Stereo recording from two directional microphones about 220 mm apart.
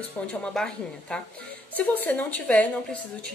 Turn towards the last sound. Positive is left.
turn(degrees=5)  # may be behind; listen again after turning